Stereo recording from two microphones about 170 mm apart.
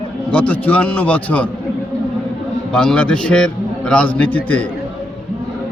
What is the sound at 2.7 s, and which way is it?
A man's voice, 5° left (ahead or behind).